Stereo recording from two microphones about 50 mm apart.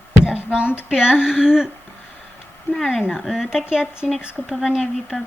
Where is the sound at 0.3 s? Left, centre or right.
Right.